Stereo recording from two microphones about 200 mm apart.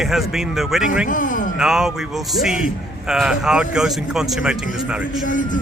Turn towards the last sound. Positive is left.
turn(degrees=-5)  # may be behind; listen again after turning